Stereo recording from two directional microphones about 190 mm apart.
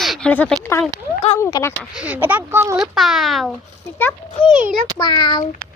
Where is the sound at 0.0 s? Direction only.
Centre (ahead or behind).